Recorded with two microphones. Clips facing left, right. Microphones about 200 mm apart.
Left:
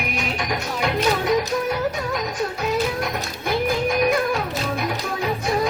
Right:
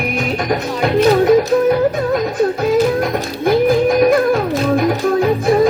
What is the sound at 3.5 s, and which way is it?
Music, 50° right (ahead or behind).